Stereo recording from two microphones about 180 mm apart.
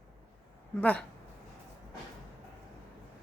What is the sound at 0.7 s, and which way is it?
Speech, 10° left (ahead or behind).